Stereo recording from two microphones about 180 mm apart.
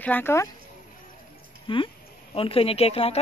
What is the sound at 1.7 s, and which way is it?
A woman's voice, 30° left (ahead or behind).